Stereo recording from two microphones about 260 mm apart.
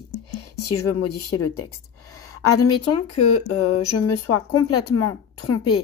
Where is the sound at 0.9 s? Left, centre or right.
Left.